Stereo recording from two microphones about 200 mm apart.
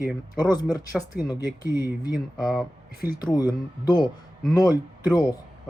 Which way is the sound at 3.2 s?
20° left (ahead or behind).